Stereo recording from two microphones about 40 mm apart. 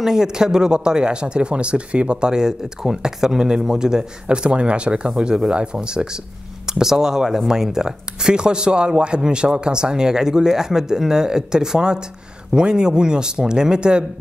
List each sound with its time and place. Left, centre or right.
0.0 s speech: centre
6.7 s speech: centre